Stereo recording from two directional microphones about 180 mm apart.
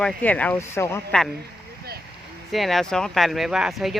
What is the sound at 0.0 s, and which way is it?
Speech, 10° left (ahead or behind).